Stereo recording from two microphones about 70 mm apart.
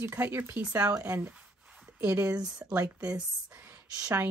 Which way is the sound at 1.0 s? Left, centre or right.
Right.